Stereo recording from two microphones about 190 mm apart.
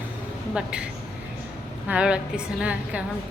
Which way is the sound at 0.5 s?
5° right (ahead or behind).